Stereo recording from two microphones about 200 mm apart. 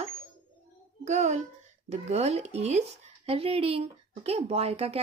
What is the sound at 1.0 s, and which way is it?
A child's voice, 35° right (ahead or behind).